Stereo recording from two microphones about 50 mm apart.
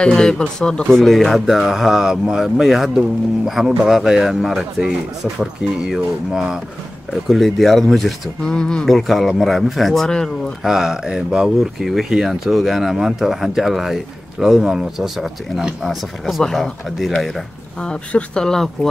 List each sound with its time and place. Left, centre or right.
0.0 s speech: centre
0.8 s speech: centre
7.1 s speech: centre
8.5 s speech: centre
8.8 s speech: centre
10.0 s speech: centre
10.6 s speech: centre
15.8 s speech: centre
17.8 s speech: centre